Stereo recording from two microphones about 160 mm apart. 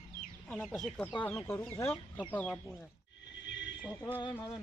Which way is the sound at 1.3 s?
15° left (ahead or behind).